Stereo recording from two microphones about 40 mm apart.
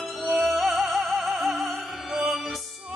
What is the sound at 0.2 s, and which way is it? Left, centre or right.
Music, centre.